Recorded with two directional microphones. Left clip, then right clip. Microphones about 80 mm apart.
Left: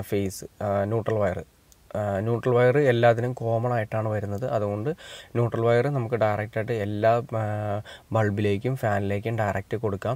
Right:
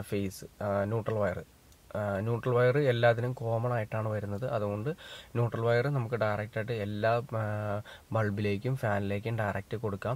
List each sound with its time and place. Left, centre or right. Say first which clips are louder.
0.1 s speech: left 8 dB; left